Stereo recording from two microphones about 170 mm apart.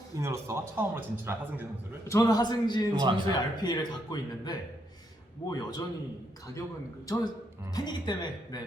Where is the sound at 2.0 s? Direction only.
20° left (ahead or behind).